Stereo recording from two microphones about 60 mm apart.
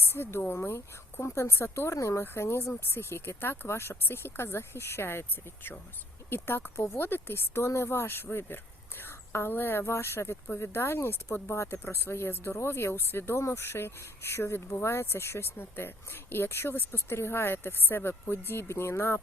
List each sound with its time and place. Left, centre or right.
0.0 s speech: left
2.2 s a woman's voice: left